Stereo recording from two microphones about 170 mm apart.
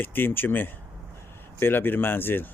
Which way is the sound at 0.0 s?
10° left (ahead or behind).